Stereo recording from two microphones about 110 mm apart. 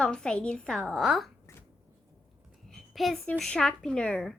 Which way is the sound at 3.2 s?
5° left (ahead or behind).